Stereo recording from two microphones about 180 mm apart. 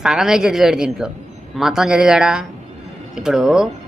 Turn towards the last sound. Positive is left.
turn(degrees=-5)  # may be behind; listen again after turning